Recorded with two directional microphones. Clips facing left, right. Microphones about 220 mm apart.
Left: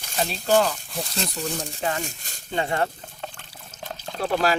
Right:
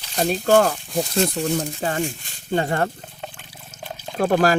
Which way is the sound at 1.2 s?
40° right (ahead or behind).